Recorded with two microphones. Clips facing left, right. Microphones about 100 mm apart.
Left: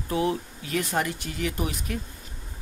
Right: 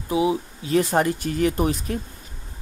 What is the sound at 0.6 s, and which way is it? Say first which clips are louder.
Speech: right 8 dB; 30° right (ahead or behind).